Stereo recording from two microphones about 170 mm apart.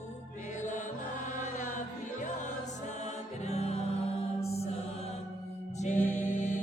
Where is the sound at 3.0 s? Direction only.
40° left (ahead or behind).